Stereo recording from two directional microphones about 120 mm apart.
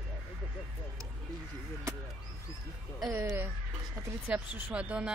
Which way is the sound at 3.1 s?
15° right (ahead or behind).